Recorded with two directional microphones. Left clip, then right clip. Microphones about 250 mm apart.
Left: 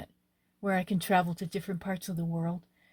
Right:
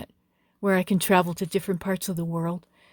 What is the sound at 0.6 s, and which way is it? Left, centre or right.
Speech, right.